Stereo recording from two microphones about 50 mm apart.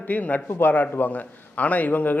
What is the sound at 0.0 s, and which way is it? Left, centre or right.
A man's voice, left.